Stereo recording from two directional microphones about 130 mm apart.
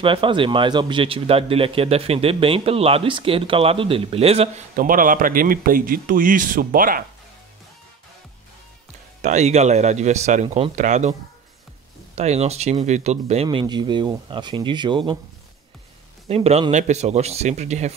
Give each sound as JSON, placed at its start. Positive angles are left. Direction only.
{"t": 0.0, "sound": "speech", "side_deg": -40}
{"t": 4.7, "sound": "a man's voice", "side_deg": -90}
{"t": 9.2, "sound": "speech", "side_deg": -60}
{"t": 12.2, "sound": "speech", "side_deg": -55}
{"t": 16.3, "sound": "speech", "side_deg": -50}
{"t": 16.7, "sound": "speech", "side_deg": -60}